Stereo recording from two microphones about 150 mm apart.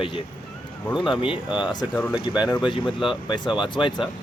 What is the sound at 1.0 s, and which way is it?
Speech, 5° right (ahead or behind).